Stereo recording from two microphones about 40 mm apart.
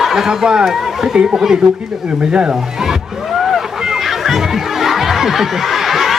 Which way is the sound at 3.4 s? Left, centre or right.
Centre.